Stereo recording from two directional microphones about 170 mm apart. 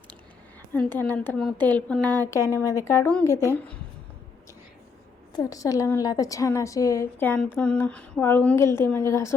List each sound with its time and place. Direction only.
0.7 s a woman's voice: 10° left (ahead or behind)
5.3 s a woman's voice: 20° left (ahead or behind)